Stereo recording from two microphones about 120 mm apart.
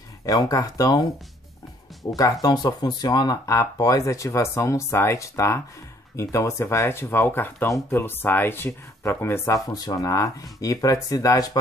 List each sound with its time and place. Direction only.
0.2 s speech: 30° left (ahead or behind)
2.4 s speech: 35° left (ahead or behind)